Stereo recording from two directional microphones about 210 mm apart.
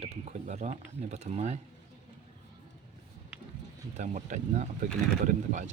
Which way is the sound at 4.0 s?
35° right (ahead or behind).